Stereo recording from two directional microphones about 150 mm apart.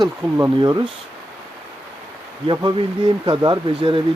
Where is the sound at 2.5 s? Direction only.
30° right (ahead or behind).